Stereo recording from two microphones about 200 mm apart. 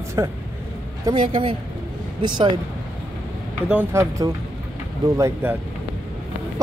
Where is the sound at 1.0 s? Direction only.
25° right (ahead or behind).